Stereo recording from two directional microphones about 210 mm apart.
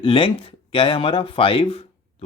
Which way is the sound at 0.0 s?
25° left (ahead or behind).